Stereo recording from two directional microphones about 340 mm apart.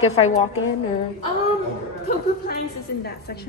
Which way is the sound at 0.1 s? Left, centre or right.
Centre.